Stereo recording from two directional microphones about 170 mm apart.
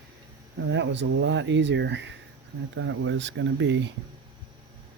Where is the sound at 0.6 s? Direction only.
90° right.